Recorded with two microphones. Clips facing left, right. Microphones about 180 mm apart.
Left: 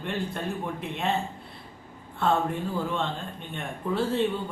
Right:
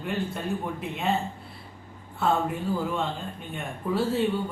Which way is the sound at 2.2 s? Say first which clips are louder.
Even; 5° right (ahead or behind).